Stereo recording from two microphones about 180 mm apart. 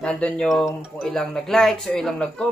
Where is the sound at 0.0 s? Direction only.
5° left (ahead or behind).